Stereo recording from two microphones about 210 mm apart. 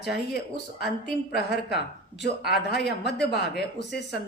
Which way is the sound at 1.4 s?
50° left (ahead or behind).